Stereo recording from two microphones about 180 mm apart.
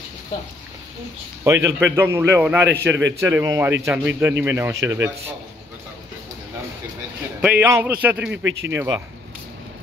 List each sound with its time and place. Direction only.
1.4 s a man's voice: 15° right (ahead or behind)
7.6 s a man's voice: 15° right (ahead or behind)
8.5 s speech: 90° right
8.7 s speech: 20° right (ahead or behind)